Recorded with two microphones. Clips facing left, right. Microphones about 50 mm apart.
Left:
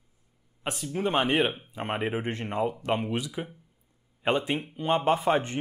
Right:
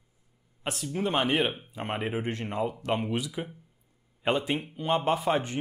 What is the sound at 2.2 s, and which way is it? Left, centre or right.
Speech, left.